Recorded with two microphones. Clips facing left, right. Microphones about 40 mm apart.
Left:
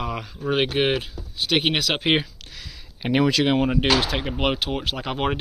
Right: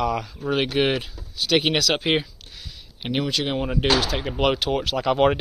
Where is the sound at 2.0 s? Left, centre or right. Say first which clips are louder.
Left 1 dB; left.